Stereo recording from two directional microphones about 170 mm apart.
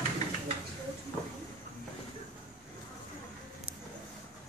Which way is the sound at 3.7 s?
10° right (ahead or behind).